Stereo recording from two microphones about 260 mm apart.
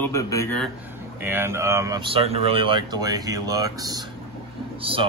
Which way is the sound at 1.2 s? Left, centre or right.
Centre.